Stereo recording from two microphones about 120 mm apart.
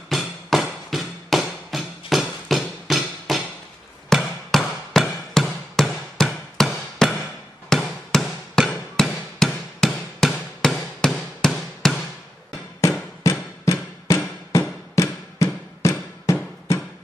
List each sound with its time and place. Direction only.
0.1 s music: centre (ahead or behind)
7.7 s hammer: 5° left (ahead or behind)
13.2 s music: 25° left (ahead or behind)